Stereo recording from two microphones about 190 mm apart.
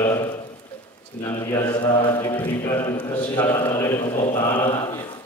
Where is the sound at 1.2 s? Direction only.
15° left (ahead or behind).